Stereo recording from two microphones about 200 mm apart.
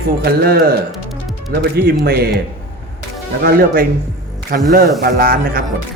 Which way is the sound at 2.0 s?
50° right (ahead or behind).